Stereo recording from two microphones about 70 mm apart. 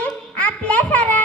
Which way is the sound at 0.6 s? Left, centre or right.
Centre.